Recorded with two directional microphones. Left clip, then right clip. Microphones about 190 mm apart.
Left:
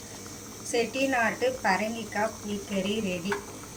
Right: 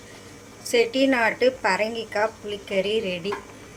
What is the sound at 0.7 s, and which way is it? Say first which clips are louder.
A woman's voice: right 6 dB; 55° right (ahead or behind).